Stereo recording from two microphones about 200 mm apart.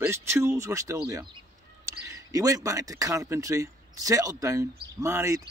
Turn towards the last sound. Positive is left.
turn(degrees=-15)  # may be behind; listen again after turning